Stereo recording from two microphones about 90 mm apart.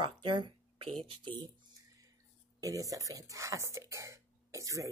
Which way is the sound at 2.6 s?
40° right (ahead or behind).